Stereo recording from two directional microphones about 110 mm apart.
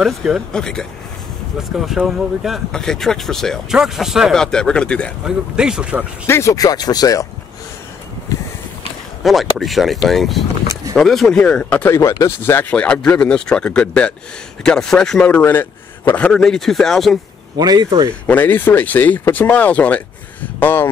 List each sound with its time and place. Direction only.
0.0 s speech: centre (ahead or behind)
5.2 s speech: 5° right (ahead or behind)
6.2 s speech: 25° left (ahead or behind)
9.2 s speech: centre (ahead or behind)
11.9 s speech: 25° left (ahead or behind)
12.7 s speech: 10° left (ahead or behind)
17.6 s speech: 40° right (ahead or behind)
18.2 s speech: 15° left (ahead or behind)